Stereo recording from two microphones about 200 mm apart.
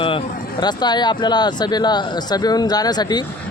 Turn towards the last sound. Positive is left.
turn(degrees=20)  # may be behind; listen again after turning